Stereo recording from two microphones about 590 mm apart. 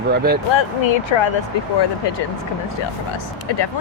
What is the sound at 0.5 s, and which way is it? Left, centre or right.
Speech, left.